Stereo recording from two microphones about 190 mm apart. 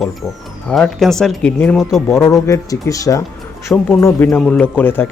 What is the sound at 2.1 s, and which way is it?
Speech, 15° left (ahead or behind).